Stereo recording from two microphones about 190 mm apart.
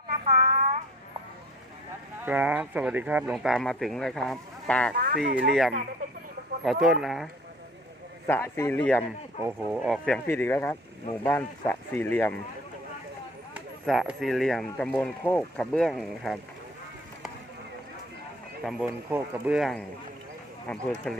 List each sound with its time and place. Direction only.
0.3 s a sound: 35° right (ahead or behind)
2.2 s speech: 5° right (ahead or behind)
5.0 s speech: 60° right (ahead or behind)
6.7 s speech: centre (ahead or behind)
8.3 s speech: 15° left (ahead or behind)
10.2 s speech: 10° left (ahead or behind)
13.5 s speech: centre (ahead or behind)
18.6 s speech: 5° right (ahead or behind)